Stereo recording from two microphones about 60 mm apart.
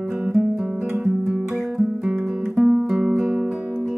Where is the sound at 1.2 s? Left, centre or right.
Centre.